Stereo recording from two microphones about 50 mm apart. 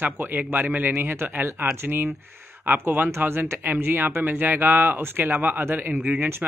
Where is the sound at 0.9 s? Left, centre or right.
Right.